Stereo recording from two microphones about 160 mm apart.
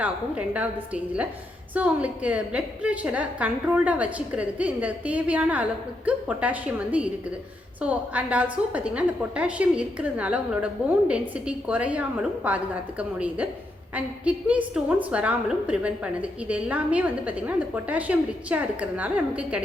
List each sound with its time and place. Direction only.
0.0 s a woman's voice: 10° right (ahead or behind)